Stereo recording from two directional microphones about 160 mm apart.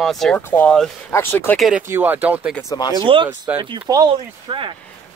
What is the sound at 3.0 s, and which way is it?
Speech, 30° right (ahead or behind).